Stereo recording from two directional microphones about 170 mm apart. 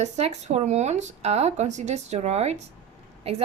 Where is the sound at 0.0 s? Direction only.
40° right (ahead or behind).